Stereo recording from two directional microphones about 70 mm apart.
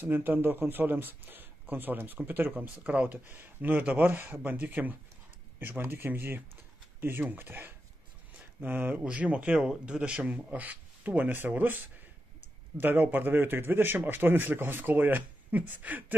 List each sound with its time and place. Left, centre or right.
0.0 s speech: right